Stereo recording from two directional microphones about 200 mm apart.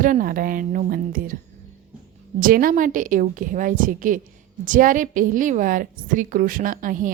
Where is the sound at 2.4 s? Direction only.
45° right (ahead or behind).